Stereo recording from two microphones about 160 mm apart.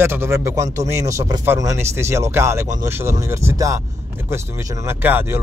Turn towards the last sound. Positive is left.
turn(degrees=-15)  # may be behind; listen again after turning